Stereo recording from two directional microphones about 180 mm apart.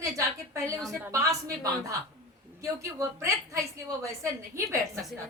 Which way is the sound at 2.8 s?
15° right (ahead or behind).